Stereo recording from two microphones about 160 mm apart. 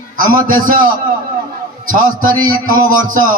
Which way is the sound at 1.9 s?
60° right (ahead or behind).